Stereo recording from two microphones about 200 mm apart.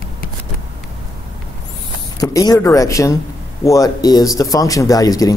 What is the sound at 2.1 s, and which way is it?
Speech, 15° left (ahead or behind).